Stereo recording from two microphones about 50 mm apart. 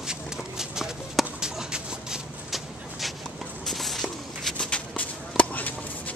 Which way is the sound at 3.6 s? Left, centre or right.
Centre.